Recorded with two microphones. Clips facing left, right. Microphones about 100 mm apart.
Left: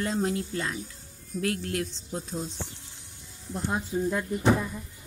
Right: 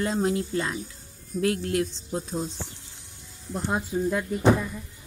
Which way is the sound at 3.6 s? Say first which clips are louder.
Right 2 dB; 25° right (ahead or behind).